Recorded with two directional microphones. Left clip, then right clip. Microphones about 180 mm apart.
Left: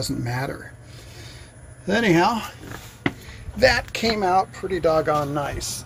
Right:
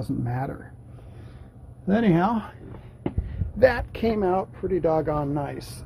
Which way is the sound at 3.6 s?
25° right (ahead or behind).